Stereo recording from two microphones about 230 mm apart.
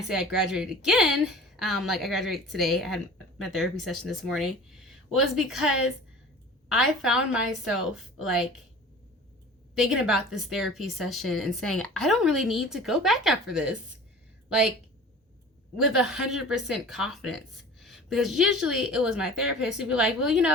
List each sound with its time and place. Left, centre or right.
0.3 s a woman's voice: centre
9.7 s a woman's voice: centre
15.8 s a woman's voice: centre